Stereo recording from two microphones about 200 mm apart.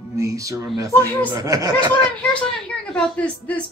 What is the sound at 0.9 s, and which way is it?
Speech, 10° left (ahead or behind).